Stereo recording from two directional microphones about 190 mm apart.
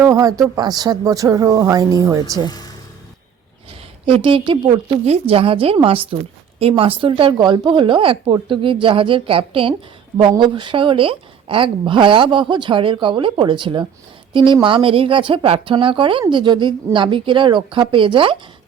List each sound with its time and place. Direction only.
0.0 s speech: 15° right (ahead or behind)
4.0 s speech: 30° right (ahead or behind)